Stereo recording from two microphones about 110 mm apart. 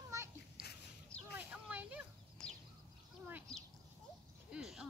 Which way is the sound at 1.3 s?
15° right (ahead or behind).